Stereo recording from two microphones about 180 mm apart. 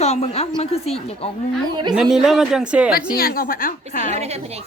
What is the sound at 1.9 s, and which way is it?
Speech, 5° right (ahead or behind).